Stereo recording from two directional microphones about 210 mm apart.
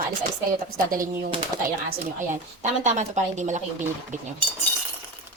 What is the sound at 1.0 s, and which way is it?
Speech, 20° right (ahead or behind).